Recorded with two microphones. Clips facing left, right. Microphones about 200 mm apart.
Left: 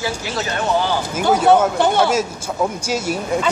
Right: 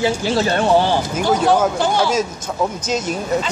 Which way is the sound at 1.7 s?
60° left (ahead or behind).